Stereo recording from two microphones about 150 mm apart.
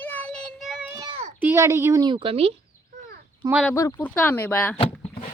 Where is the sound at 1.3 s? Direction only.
15° right (ahead or behind).